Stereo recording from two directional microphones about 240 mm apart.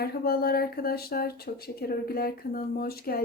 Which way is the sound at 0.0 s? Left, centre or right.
Left.